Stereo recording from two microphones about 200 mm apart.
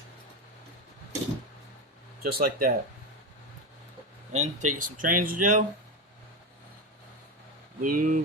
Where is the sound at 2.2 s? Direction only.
45° right (ahead or behind).